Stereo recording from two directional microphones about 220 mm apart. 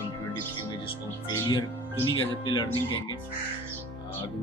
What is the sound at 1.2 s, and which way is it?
Speech, 20° left (ahead or behind).